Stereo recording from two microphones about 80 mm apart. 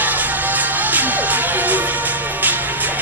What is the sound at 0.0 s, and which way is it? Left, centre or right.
Music, right.